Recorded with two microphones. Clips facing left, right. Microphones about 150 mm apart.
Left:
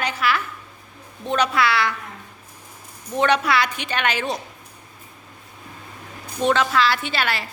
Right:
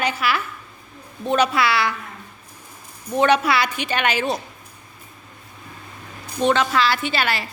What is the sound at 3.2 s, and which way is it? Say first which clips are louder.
A woman's voice: right 2 dB; 5° right (ahead or behind).